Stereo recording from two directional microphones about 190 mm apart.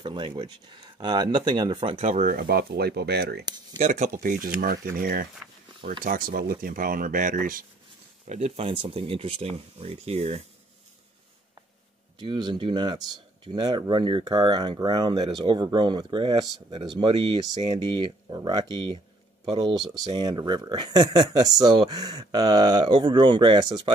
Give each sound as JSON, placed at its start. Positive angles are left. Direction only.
{"t": 0.0, "sound": "speech", "side_deg": -25}
{"t": 3.4, "sound": "speech", "side_deg": -20}
{"t": 3.8, "sound": "speech", "side_deg": -40}
{"t": 12.2, "sound": "speech", "side_deg": -25}
{"t": 19.5, "sound": "speech", "side_deg": -25}